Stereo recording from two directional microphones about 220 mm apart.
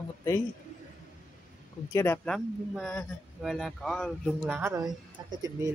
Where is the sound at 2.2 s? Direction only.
Centre (ahead or behind).